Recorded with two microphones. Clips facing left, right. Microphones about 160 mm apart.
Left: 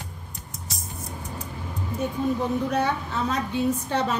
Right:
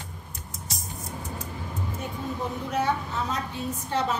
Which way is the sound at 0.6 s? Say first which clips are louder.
Even; centre (ahead or behind).